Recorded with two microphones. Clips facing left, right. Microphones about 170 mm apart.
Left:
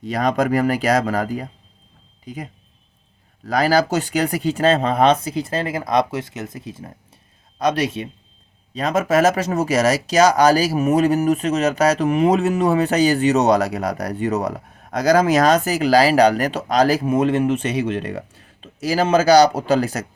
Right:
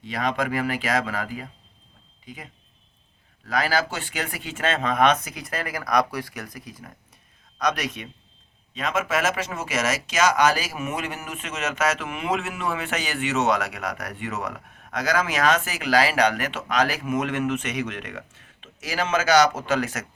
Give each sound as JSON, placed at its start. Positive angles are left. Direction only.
{"t": 0.0, "sound": "speech", "side_deg": 40}